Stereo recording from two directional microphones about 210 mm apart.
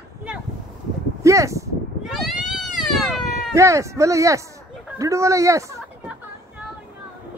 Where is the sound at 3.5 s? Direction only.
15° right (ahead or behind).